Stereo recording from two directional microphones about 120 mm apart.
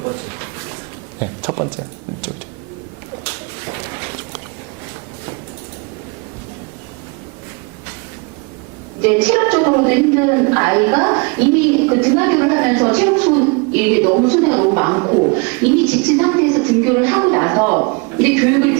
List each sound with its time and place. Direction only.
1.5 s speech: 20° right (ahead or behind)
9.0 s a woman's voice: 15° right (ahead or behind)
15.4 s a woman's voice: 15° right (ahead or behind)